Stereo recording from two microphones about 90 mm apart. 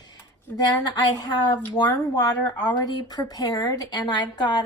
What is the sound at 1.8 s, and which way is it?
Speech, 65° left (ahead or behind).